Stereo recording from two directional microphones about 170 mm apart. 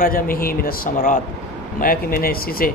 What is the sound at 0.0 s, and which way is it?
Speech, 55° left (ahead or behind).